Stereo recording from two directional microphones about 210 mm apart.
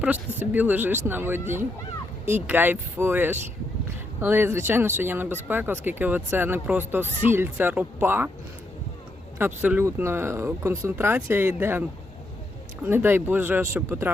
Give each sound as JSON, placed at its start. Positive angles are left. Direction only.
{"t": 0.0, "sound": "speech", "side_deg": -10}
{"t": 9.4, "sound": "speech", "side_deg": -10}